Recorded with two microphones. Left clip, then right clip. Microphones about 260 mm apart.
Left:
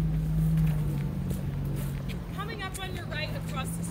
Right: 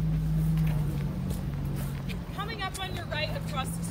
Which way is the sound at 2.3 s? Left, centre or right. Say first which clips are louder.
Right 3 dB; centre.